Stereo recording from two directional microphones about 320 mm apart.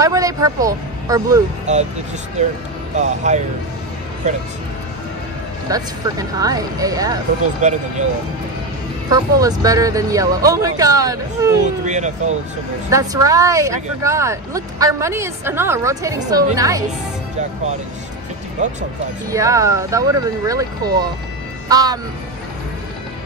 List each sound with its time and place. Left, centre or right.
0.0 s speech: centre
1.7 s speech: right
3.0 s speech: right
5.7 s speech: centre
7.6 s speech: right
9.1 s speech: centre
11.6 s speech: right
12.9 s speech: centre
18.6 s speech: right
19.3 s speech: centre